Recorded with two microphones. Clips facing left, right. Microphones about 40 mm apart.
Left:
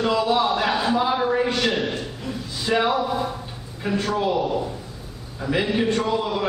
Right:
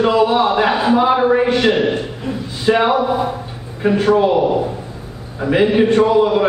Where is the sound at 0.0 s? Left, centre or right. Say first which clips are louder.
Right 7 dB; right.